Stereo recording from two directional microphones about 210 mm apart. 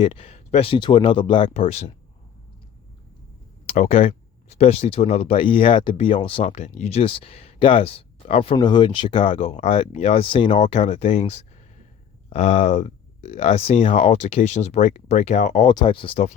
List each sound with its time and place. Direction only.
0.0 s speech: 25° left (ahead or behind)
3.7 s speech: 30° left (ahead or behind)
15.7 s speech: 20° left (ahead or behind)